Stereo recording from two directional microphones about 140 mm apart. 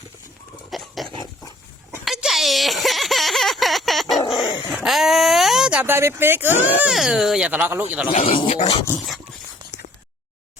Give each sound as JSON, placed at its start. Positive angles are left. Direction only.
{"t": 0.7, "sound": "dog", "side_deg": 0}
{"t": 2.0, "sound": "a sound", "side_deg": 0}
{"t": 5.9, "sound": "speech", "side_deg": -20}
{"t": 6.8, "sound": "speech", "side_deg": 0}
{"t": 8.1, "sound": "speech", "side_deg": 45}
{"t": 9.0, "sound": "a sound", "side_deg": 0}